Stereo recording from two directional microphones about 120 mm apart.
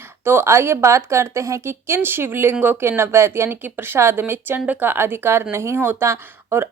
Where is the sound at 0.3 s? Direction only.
20° right (ahead or behind).